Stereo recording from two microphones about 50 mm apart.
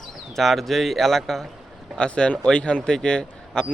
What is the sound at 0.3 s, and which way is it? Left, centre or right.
Speech, centre.